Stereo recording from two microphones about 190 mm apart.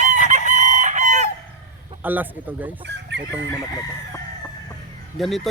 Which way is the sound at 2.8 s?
65° right (ahead or behind).